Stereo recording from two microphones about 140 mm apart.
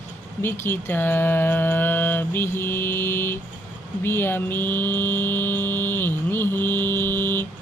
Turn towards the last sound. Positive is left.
turn(degrees=15)  # may be behind; listen again after turning